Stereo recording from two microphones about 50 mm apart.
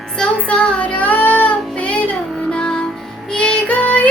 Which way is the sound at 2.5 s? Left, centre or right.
Centre.